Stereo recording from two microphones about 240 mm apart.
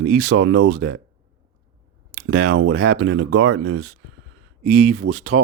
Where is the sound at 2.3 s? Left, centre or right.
Right.